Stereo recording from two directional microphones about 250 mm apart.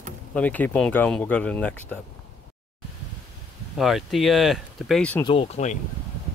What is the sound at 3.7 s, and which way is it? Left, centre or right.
Speech, centre.